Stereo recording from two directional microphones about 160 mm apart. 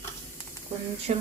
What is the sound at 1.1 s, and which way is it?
Speech, 45° right (ahead or behind).